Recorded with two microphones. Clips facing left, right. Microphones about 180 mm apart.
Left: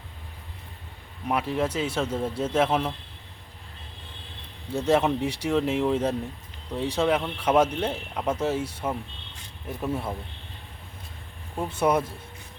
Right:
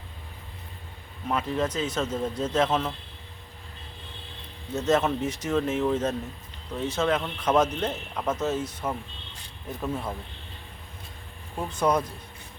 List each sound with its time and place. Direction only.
1.3 s speech: 10° left (ahead or behind)
4.7 s speech: 10° left (ahead or behind)
11.5 s speech: 10° left (ahead or behind)